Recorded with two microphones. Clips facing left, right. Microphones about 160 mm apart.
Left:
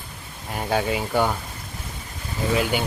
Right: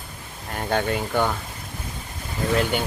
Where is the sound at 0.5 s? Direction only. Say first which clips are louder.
Even; 5° left (ahead or behind).